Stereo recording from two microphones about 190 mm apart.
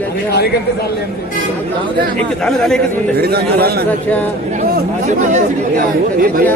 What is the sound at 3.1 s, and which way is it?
Speech, 55° right (ahead or behind).